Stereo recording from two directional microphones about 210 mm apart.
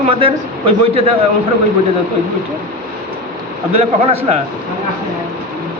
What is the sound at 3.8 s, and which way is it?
Speech, 30° right (ahead or behind).